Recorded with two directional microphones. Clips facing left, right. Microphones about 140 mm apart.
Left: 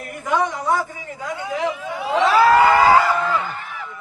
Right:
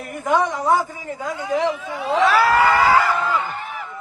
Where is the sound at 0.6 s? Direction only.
45° right (ahead or behind).